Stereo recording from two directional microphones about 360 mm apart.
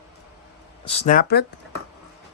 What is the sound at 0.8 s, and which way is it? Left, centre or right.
Speech, centre.